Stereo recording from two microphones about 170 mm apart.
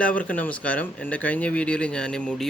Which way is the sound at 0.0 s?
10° left (ahead or behind).